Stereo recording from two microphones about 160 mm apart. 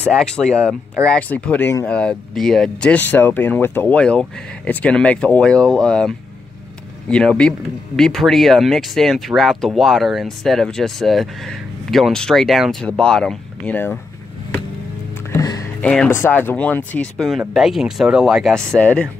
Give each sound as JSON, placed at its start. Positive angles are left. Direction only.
{"t": 0.0, "sound": "speech", "side_deg": 5}
{"t": 15.3, "sound": "music", "side_deg": 25}
{"t": 15.8, "sound": "speech", "side_deg": 5}